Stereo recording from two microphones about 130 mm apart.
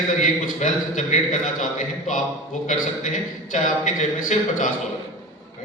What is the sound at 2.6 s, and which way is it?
A man's voice, 70° left (ahead or behind).